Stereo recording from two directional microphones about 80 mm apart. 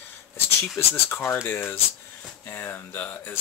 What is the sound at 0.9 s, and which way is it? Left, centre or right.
Speech, left.